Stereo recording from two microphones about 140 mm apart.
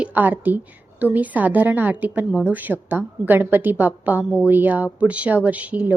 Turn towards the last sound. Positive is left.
turn(degrees=-10)  # may be behind; listen again after turning